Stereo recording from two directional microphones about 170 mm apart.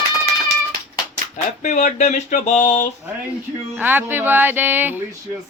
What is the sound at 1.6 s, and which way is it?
Speech, 40° left (ahead or behind).